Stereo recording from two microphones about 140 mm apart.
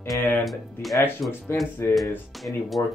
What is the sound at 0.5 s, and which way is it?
Speech, centre (ahead or behind).